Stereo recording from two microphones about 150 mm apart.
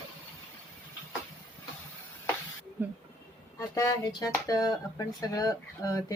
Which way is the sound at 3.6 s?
20° left (ahead or behind).